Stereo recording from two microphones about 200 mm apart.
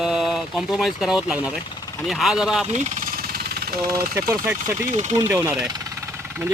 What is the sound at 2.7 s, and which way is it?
Jackhammer, 40° right (ahead or behind).